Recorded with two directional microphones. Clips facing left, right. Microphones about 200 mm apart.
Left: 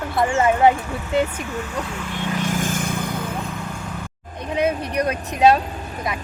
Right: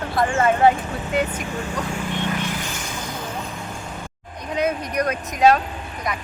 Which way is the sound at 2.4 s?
45° left (ahead or behind).